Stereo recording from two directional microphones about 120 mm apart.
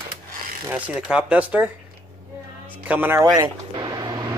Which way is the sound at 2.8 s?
15° right (ahead or behind).